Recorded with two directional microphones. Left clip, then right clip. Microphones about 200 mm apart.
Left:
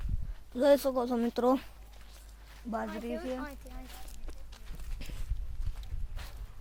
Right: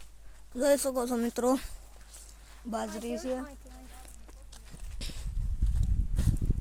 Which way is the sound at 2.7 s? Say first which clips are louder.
Right 1 dB; 15° right (ahead or behind).